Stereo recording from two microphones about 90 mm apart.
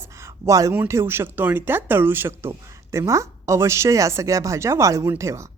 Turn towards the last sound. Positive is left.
turn(degrees=-35)  # may be behind; listen again after turning